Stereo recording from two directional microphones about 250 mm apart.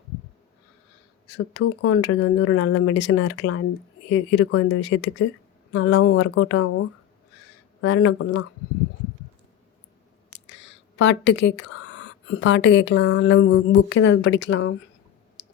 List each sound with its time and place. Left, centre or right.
1.5 s speech: left
10.3 s speech: left